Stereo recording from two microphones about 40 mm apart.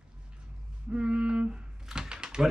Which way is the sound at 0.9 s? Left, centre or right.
Right.